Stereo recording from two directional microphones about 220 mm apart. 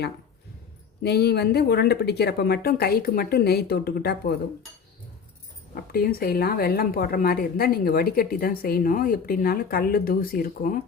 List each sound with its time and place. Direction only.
1.0 s speech: 45° left (ahead or behind)
5.7 s speech: 45° left (ahead or behind)